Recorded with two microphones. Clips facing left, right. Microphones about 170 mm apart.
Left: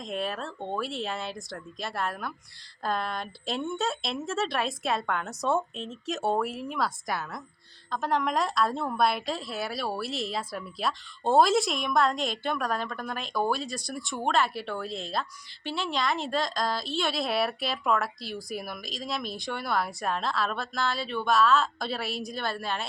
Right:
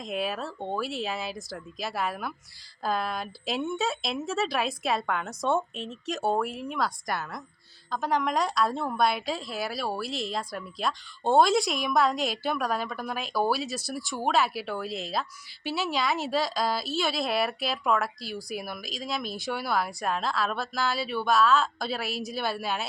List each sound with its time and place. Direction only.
0.0 s a woman's voice: 5° right (ahead or behind)